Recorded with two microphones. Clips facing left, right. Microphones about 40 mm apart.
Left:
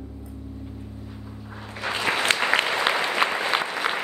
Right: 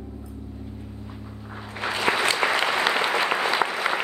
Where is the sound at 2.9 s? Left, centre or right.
Centre.